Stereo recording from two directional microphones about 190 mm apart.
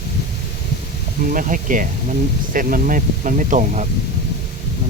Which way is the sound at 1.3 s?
45° right (ahead or behind).